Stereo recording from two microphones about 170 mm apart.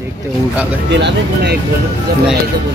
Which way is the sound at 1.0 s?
75° right (ahead or behind).